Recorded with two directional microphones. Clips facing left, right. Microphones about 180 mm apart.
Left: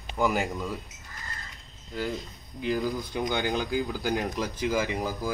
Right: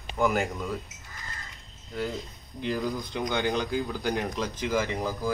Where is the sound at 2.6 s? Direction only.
5° left (ahead or behind).